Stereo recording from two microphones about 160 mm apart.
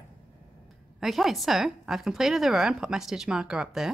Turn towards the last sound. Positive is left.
turn(degrees=-5)  # may be behind; listen again after turning